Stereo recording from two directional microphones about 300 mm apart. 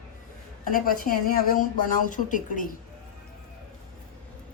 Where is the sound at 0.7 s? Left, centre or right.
Left.